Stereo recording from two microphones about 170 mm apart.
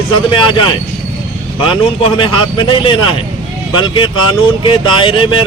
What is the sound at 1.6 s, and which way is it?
Speech, 30° left (ahead or behind).